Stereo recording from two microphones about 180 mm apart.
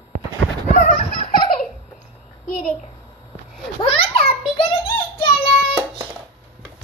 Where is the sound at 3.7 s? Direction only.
30° left (ahead or behind).